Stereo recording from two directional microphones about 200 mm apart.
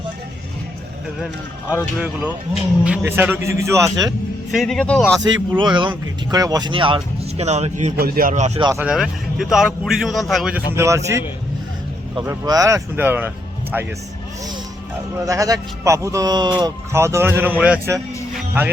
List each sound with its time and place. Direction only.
2.8 s speech: 10° right (ahead or behind)
4.5 s a man's voice: centre (ahead or behind)
5.2 s speech: 25° right (ahead or behind)
7.9 s speech: 50° right (ahead or behind)
8.5 s speech: 20° right (ahead or behind)
8.8 s a man's voice: 5° right (ahead or behind)
10.8 s speech: 15° right (ahead or behind)
12.2 s speech: 15° right (ahead or behind)
15.2 s speech: 15° right (ahead or behind)
18.3 s music: 10° right (ahead or behind)